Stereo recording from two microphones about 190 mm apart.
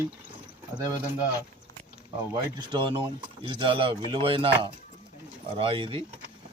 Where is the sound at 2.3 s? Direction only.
25° right (ahead or behind).